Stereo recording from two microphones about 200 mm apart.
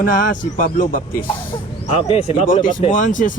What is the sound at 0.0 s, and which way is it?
Speech, 40° left (ahead or behind).